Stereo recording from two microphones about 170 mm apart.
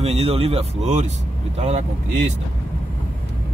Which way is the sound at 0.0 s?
35° right (ahead or behind).